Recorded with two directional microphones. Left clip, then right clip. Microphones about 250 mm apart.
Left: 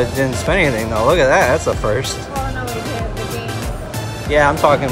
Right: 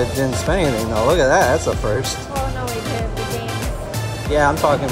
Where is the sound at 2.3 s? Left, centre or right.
Centre.